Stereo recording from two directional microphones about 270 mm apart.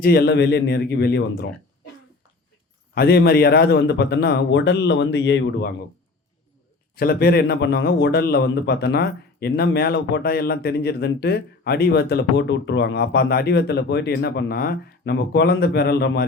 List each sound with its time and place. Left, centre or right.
0.0 s a man's voice: left
2.9 s a man's voice: left
6.9 s a man's voice: left